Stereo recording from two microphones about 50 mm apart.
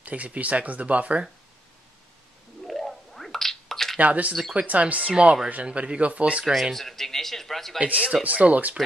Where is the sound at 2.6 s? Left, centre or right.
Centre.